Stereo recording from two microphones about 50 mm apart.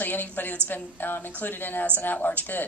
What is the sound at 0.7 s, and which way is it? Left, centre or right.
A woman's voice, left.